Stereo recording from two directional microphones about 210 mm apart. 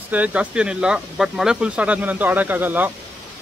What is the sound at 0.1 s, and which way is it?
Speech, 5° right (ahead or behind).